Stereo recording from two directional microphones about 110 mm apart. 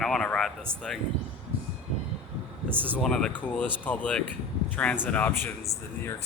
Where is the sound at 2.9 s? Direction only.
5° left (ahead or behind).